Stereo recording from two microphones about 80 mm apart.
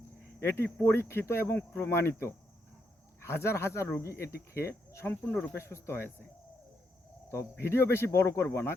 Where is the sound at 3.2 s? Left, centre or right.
Left.